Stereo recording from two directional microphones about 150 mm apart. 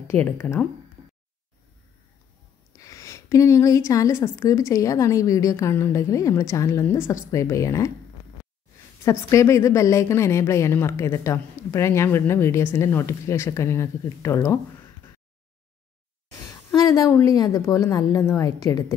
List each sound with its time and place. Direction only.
0.1 s speech: 15° left (ahead or behind)
2.8 s a woman's voice: 20° left (ahead or behind)
9.0 s a woman's voice: 20° left (ahead or behind)
16.7 s a woman's voice: 25° left (ahead or behind)